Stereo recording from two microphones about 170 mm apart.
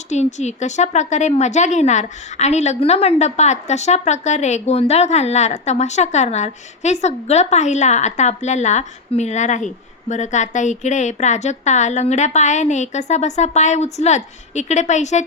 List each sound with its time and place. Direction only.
0.1 s a woman's voice: 45° left (ahead or behind)